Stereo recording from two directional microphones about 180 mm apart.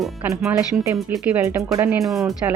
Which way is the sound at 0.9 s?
15° right (ahead or behind).